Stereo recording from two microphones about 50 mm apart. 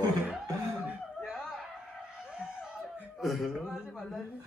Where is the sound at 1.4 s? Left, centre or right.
Centre.